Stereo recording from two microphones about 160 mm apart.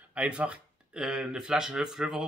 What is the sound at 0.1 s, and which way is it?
Speech, 10° right (ahead or behind).